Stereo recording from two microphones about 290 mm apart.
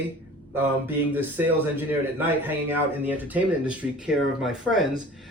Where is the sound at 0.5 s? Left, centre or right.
Centre.